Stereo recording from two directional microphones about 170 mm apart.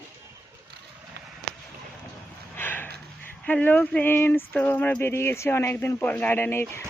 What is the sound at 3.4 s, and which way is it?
Speech, 10° left (ahead or behind).